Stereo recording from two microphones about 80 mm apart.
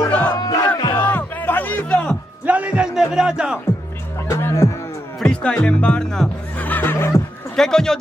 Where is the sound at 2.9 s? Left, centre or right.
Centre.